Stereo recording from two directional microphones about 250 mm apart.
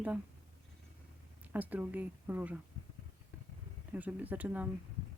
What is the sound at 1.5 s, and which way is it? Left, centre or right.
Speech, centre.